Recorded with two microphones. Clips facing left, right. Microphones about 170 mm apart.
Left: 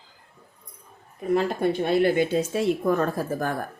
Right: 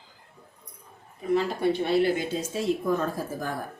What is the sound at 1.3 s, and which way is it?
A woman's voice, 50° left (ahead or behind).